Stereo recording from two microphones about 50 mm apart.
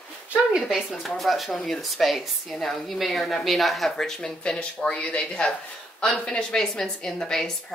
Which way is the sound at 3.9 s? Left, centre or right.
Centre.